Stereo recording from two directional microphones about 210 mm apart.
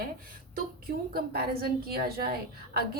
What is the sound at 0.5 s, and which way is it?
A woman's voice, 45° right (ahead or behind).